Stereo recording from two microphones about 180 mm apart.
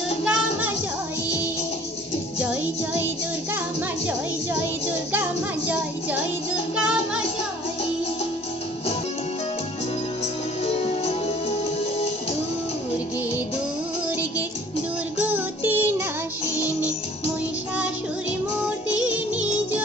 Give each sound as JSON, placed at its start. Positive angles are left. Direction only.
{"t": 0.2, "sound": "music", "side_deg": -5}
{"t": 5.1, "sound": "music", "side_deg": -10}
{"t": 10.6, "sound": "music", "side_deg": 35}
{"t": 15.2, "sound": "child singing", "side_deg": -10}